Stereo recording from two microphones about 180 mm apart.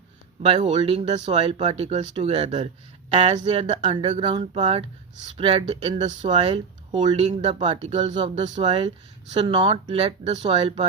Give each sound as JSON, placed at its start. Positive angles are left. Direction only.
{"t": 0.7, "sound": "speech", "side_deg": -30}